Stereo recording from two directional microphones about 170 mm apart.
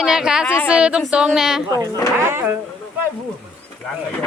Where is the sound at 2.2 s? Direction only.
15° right (ahead or behind).